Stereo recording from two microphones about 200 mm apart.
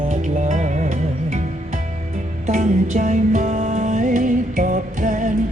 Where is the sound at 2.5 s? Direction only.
40° right (ahead or behind).